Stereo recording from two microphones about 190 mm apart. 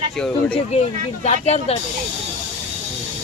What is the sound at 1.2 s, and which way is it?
Speech, 35° left (ahead or behind).